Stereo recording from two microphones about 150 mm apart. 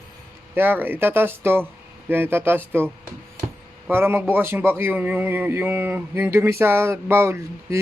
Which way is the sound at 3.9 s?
15° right (ahead or behind).